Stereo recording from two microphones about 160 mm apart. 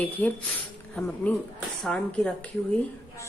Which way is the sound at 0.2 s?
10° left (ahead or behind).